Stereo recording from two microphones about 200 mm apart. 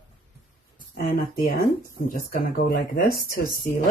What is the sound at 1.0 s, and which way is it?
Speech, 45° left (ahead or behind).